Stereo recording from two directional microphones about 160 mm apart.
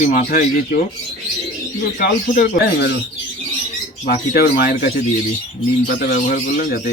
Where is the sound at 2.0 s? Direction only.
55° left (ahead or behind); by 2.9 s 75° left (ahead or behind).